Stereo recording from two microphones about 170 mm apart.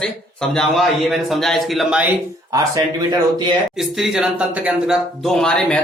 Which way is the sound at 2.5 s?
20° right (ahead or behind).